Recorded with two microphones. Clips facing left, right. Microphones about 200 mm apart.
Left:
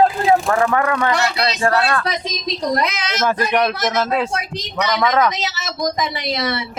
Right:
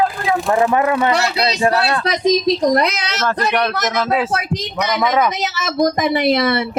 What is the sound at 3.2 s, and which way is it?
A man's voice, 5° left (ahead or behind).